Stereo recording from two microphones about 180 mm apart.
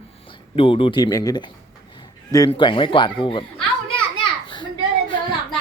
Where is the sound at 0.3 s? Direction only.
30° left (ahead or behind).